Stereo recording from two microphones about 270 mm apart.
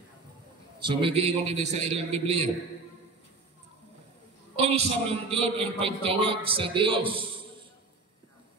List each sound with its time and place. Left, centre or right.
0.8 s a man's voice: centre
4.6 s a man's voice: right